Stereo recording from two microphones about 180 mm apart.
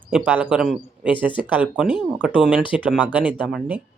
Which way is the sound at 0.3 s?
5° right (ahead or behind).